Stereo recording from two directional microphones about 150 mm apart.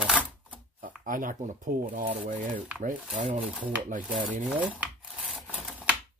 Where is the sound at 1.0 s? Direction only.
60° right (ahead or behind).